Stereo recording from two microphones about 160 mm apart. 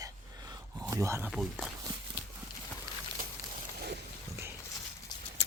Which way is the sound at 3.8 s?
90° right.